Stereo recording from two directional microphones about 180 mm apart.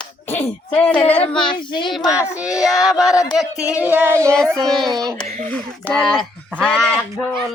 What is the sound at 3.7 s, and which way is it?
Music, 10° right (ahead or behind).